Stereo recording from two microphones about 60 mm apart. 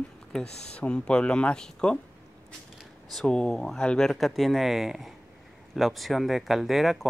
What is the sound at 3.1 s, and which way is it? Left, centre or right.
Speech, centre.